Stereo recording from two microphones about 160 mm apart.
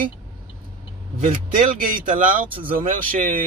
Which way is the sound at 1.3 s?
55° right (ahead or behind).